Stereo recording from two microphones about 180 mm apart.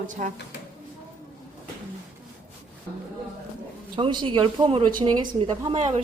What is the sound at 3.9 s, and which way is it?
A woman's voice, 25° right (ahead or behind).